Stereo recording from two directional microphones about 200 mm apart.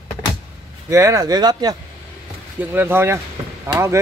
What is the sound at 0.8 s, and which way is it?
Speech, 15° right (ahead or behind).